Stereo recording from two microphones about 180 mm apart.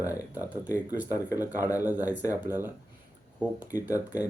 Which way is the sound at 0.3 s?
10° right (ahead or behind).